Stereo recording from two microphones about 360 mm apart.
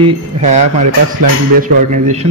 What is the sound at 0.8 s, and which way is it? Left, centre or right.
Speech, right.